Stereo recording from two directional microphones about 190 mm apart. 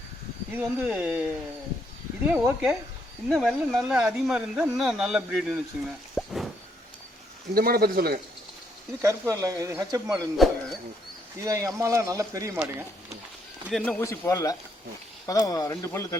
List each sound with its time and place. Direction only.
0.5 s speech: 5° right (ahead or behind)
2.2 s speech: 5° right (ahead or behind)
6.1 s a sound: centre (ahead or behind)
7.5 s speech: 50° right (ahead or behind)
9.0 s speech: 15° right (ahead or behind)
10.3 s a sound: centre (ahead or behind)
11.3 s speech: 15° right (ahead or behind)
13.7 s speech: centre (ahead or behind)
14.0 s speech: 15° left (ahead or behind)